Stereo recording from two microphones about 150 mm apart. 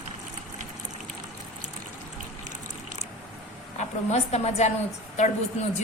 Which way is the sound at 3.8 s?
45° left (ahead or behind).